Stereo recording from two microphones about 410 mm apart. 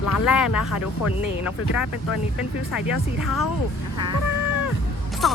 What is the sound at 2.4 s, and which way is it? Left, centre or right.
Speech, centre.